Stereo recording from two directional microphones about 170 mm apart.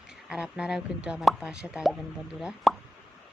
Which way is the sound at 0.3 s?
5° right (ahead or behind).